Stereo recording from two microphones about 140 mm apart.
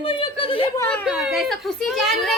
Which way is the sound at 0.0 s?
40° left (ahead or behind).